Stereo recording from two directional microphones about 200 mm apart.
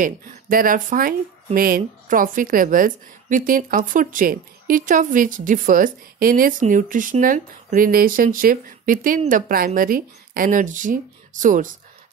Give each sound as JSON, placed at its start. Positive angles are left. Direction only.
{"t": 0.0, "sound": "speech", "side_deg": -45}